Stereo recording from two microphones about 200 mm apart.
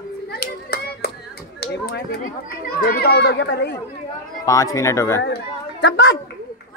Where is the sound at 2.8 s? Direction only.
50° left (ahead or behind).